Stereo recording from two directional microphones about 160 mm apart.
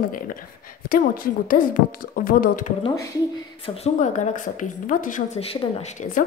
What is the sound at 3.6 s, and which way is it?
A woman's voice, 40° left (ahead or behind).